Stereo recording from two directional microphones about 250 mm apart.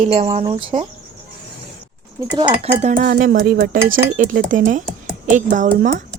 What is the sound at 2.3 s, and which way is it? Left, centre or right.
Speech, centre.